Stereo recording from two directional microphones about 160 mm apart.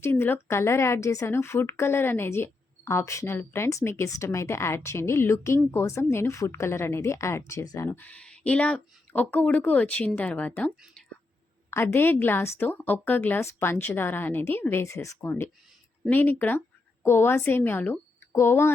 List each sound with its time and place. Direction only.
0.0 s a woman's voice: 15° left (ahead or behind)